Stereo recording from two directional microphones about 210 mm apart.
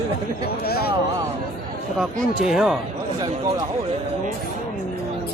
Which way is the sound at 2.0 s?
Centre (ahead or behind).